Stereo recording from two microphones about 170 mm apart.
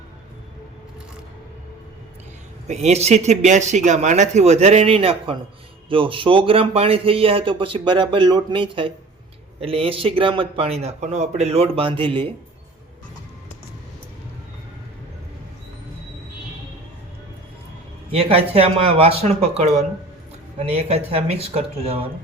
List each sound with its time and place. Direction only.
2.6 s speech: 40° right (ahead or behind)
18.1 s speech: 35° right (ahead or behind)